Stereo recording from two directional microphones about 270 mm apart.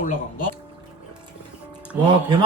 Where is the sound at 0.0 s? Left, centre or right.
Left.